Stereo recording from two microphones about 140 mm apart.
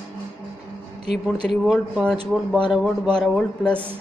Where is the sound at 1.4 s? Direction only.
5° right (ahead or behind).